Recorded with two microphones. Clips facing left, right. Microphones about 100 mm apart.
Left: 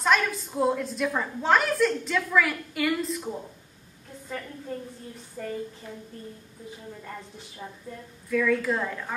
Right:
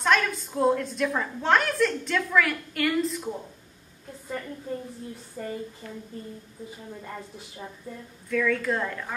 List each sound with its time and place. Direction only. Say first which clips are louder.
0.0 s a woman's voice: even; centre (ahead or behind)
5.4 s a woman's voice: even; 5° right (ahead or behind)
5.8 s speech: right 1 dB; 15° left (ahead or behind)
8.3 s a woman's voice: left 1 dB; 5° left (ahead or behind)